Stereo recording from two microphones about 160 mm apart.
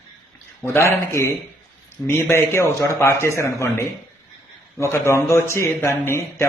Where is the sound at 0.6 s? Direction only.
15° left (ahead or behind).